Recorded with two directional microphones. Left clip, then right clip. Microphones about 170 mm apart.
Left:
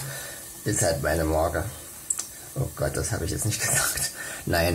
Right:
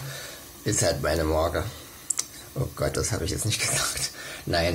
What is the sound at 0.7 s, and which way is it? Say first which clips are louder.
Speech: even; centre (ahead or behind).